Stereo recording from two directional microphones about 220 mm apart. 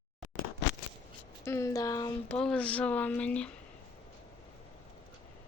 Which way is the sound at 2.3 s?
5° left (ahead or behind).